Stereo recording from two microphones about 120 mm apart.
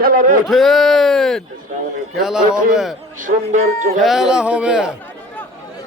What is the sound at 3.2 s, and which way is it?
Speech, 90° right.